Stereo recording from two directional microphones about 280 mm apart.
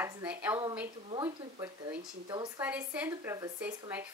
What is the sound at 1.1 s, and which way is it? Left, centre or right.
Speech, centre.